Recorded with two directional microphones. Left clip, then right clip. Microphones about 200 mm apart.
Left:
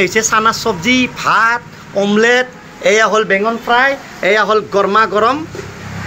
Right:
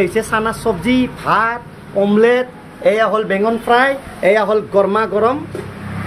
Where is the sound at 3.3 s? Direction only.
20° right (ahead or behind).